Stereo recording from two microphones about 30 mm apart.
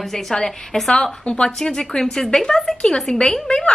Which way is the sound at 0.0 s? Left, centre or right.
Centre.